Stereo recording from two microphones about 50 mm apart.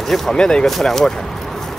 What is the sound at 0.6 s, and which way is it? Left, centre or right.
Speech, centre.